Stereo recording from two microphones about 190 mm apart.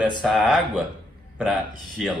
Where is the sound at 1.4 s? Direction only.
Centre (ahead or behind).